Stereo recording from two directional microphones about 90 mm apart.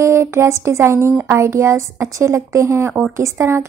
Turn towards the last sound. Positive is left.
turn(degrees=-30)  # may be behind; listen again after turning